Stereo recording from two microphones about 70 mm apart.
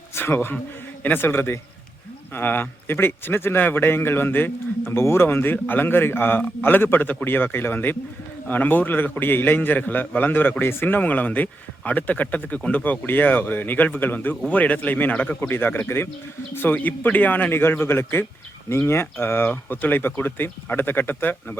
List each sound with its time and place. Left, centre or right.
0.1 s a man's voice: left
15.4 s a man's voice: left